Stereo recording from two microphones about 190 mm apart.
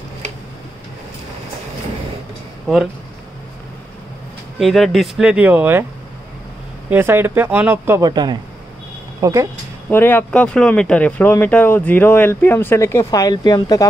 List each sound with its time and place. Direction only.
4.6 s speech: centre (ahead or behind)
6.9 s speech: 10° right (ahead or behind)
9.8 s speech: 10° left (ahead or behind)